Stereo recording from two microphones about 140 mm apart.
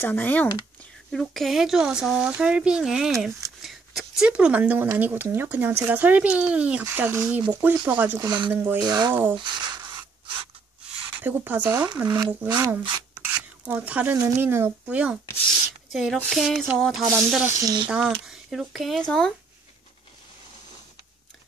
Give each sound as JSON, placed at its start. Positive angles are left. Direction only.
{"t": 0.0, "sound": "speech", "side_deg": 15}
{"t": 8.8, "sound": "speech", "side_deg": -30}
{"t": 9.1, "sound": "speech", "side_deg": -15}
{"t": 9.4, "sound": "speech", "side_deg": -30}
{"t": 11.1, "sound": "speech", "side_deg": -15}
{"t": 12.4, "sound": "speech", "side_deg": -25}
{"t": 13.1, "sound": "a sound", "side_deg": -15}
{"t": 14.1, "sound": "speech", "side_deg": -20}
{"t": 15.9, "sound": "a sound", "side_deg": 0}
{"t": 16.2, "sound": "speech", "side_deg": 0}
{"t": 17.5, "sound": "speech", "side_deg": -25}
{"t": 17.8, "sound": "speech", "side_deg": -5}